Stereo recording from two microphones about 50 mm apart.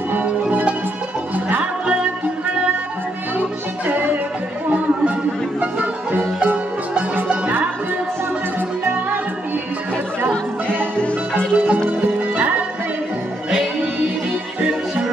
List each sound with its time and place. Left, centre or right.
0.1 s music: right
3.3 s music: right
6.1 s music: right
10.8 s music: left
11.5 s music: right
14.6 s music: right